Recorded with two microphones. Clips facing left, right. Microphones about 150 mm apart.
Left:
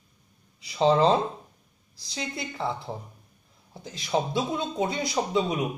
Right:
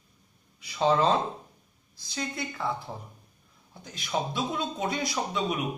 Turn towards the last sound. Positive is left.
turn(degrees=25)  # may be behind; listen again after turning